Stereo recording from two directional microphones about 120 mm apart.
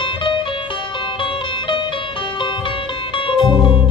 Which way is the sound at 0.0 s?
45° left (ahead or behind).